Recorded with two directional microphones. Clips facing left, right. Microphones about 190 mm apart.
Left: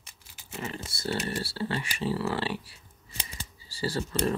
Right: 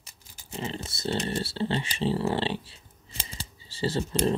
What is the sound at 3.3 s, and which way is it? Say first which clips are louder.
Shuffling cards: right 2 dB; 30° right (ahead or behind).